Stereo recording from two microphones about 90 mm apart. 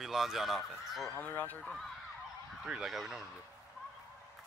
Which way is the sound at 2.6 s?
5° right (ahead or behind).